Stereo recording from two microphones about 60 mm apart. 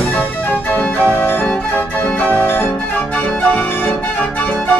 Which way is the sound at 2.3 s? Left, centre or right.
Left.